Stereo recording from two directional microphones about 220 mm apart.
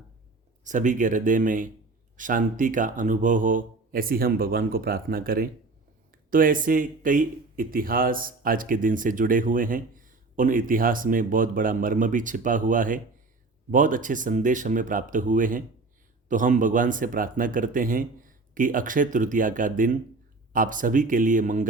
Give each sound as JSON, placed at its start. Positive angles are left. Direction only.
{"t": 0.6, "sound": "speech", "side_deg": -35}